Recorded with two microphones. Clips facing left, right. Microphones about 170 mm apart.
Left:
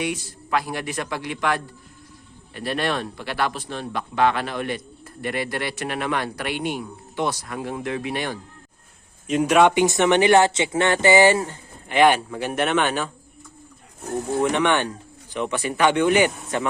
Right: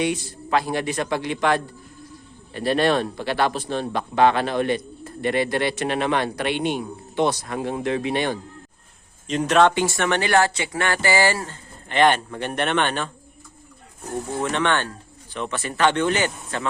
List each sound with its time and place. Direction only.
0.0 s speech: 30° right (ahead or behind)
9.2 s speech: 10° left (ahead or behind)
14.4 s speech: 15° left (ahead or behind)